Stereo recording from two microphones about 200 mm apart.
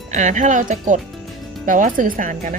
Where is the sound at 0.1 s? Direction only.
35° right (ahead or behind).